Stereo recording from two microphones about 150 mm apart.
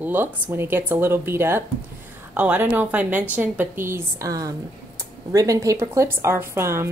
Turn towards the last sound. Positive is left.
turn(degrees=-15)  # may be behind; listen again after turning